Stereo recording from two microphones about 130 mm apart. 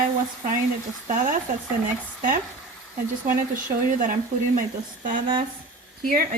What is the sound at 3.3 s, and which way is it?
Speech, 90° right.